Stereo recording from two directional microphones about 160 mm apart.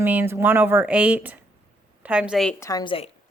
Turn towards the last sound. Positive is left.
turn(degrees=35)  # may be behind; listen again after turning